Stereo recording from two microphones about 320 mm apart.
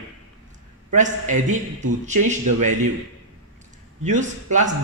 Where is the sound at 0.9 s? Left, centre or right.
Right.